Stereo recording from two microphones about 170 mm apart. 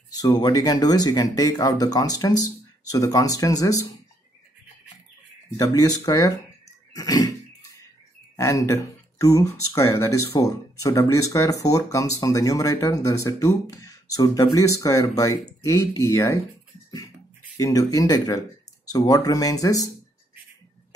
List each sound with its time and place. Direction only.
0.1 s speech: 25° left (ahead or behind)
5.6 s speech: 20° left (ahead or behind)
6.9 s a sound: 20° left (ahead or behind)
8.4 s speech: 20° left (ahead or behind)
17.6 s speech: 20° left (ahead or behind)